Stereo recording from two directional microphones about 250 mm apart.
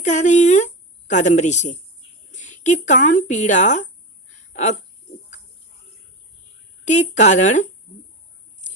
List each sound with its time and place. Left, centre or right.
0.0 s speech: left
6.8 s speech: left